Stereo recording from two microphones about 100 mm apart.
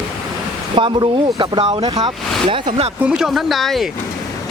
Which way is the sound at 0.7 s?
55° right (ahead or behind).